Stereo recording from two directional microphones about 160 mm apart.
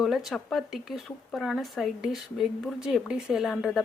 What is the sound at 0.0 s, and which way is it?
Speech, centre (ahead or behind).